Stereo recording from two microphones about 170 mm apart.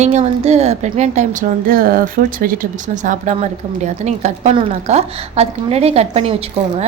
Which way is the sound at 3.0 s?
45° right (ahead or behind).